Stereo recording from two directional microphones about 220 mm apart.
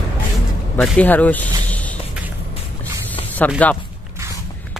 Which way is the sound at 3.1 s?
10° left (ahead or behind).